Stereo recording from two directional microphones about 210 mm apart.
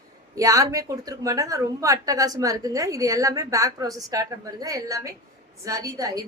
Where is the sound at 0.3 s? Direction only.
15° right (ahead or behind).